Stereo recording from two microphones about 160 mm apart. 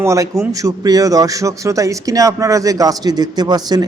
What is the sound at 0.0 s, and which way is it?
Speech, 20° right (ahead or behind).